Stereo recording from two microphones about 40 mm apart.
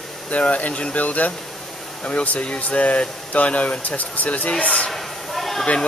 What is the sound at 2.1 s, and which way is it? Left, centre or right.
Speech, left.